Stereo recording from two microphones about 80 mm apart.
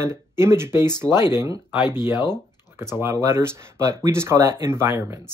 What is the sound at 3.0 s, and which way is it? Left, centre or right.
Speech, right.